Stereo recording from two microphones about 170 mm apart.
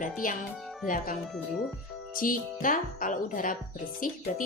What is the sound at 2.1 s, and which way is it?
Speech, 55° left (ahead or behind).